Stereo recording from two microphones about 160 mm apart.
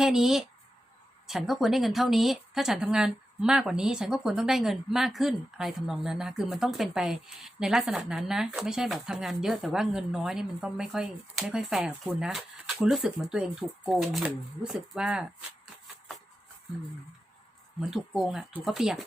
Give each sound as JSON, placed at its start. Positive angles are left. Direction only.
{"t": 0.0, "sound": "speech", "side_deg": -5}
{"t": 17.7, "sound": "speech", "side_deg": 0}